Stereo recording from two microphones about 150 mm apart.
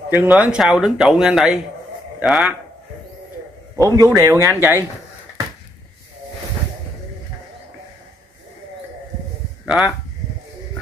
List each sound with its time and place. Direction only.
0.1 s a man's voice: 10° right (ahead or behind)
3.7 s a man's voice: 20° right (ahead or behind)
9.7 s speech: 5° right (ahead or behind)